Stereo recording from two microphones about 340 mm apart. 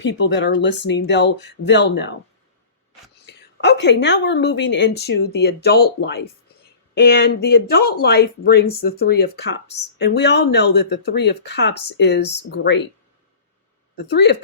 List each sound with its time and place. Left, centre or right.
0.0 s speech: left
3.2 s a woman's voice: left
13.9 s a woman's voice: left